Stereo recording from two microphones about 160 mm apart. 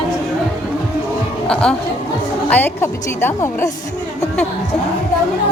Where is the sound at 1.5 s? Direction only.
5° left (ahead or behind).